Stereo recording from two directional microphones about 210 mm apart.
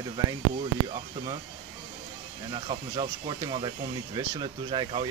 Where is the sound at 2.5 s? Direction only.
20° right (ahead or behind).